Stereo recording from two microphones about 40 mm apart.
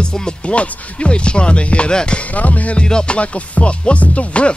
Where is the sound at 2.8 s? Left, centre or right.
Left.